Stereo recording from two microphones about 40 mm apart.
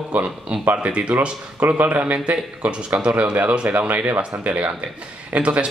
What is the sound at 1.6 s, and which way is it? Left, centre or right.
Speech, right.